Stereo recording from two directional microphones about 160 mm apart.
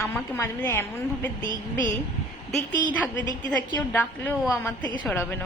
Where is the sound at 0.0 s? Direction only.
15° left (ahead or behind).